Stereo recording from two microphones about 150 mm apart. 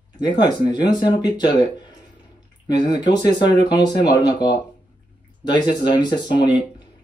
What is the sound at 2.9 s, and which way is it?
Speech, 30° left (ahead or behind).